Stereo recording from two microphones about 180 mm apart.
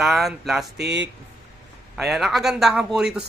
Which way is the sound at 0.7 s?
75° right (ahead or behind).